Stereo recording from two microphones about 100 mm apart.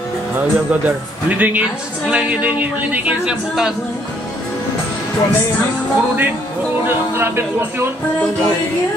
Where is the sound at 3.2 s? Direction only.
5° right (ahead or behind).